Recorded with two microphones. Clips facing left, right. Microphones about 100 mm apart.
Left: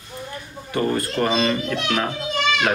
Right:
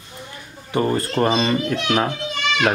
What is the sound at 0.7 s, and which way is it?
Speech, 30° right (ahead or behind).